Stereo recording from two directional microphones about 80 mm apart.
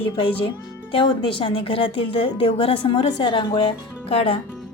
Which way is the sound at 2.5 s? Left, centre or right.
Left.